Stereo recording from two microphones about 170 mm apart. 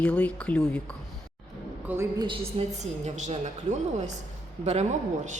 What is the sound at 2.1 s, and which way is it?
A woman's voice, 30° right (ahead or behind).